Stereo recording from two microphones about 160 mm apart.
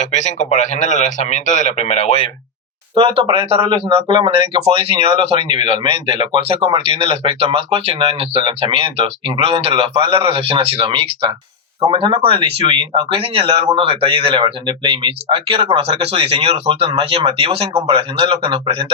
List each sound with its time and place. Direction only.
0.0 s a man's voice: 45° left (ahead or behind)
2.9 s speech: 35° right (ahead or behind)